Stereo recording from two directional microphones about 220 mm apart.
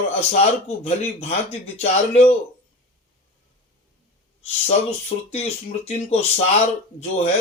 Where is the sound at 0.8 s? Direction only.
30° left (ahead or behind).